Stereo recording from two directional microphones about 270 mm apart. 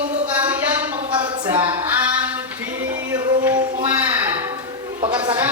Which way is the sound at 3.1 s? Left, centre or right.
Centre.